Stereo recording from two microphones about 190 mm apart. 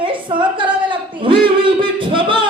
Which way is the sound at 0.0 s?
25° right (ahead or behind).